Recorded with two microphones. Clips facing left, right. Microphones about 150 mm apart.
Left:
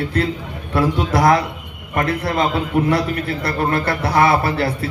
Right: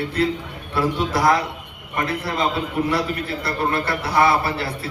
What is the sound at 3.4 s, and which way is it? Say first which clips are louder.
A man's voice: left 3 dB; 50° left (ahead or behind).